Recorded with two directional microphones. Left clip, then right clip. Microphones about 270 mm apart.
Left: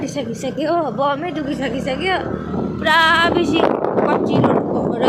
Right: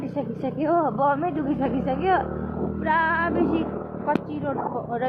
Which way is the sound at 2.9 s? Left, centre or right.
Centre.